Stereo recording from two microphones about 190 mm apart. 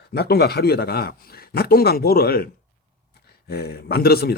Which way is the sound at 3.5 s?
55° left (ahead or behind).